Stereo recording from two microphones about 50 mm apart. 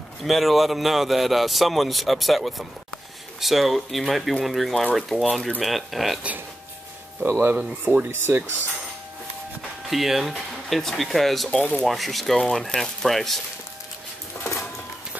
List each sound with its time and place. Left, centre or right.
0.2 s a man's voice: centre
5.1 s speech: left
5.6 s a man's voice: centre
7.2 s speech: right
7.8 s speech: right
9.8 s a man's voice: centre
10.3 s a man's voice: centre
11.5 s speech: left
11.8 s a man's voice: centre